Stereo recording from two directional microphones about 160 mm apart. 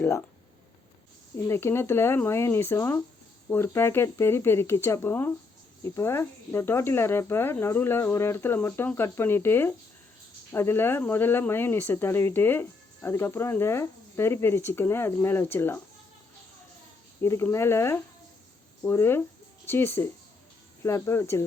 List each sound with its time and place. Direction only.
0.0 s speech: 10° left (ahead or behind)
1.5 s speech: 15° left (ahead or behind)
17.2 s speech: 20° left (ahead or behind)